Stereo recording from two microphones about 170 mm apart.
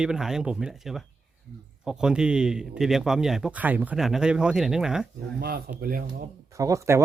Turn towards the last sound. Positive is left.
turn(degrees=-15)  # may be behind; listen again after turning